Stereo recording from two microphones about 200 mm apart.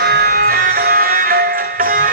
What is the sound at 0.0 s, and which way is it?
Music, 50° right (ahead or behind).